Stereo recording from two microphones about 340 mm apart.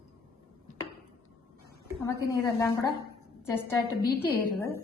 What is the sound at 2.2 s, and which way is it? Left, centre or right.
Speech, centre.